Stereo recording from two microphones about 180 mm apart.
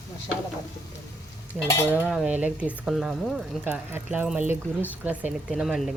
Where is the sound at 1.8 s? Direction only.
10° right (ahead or behind).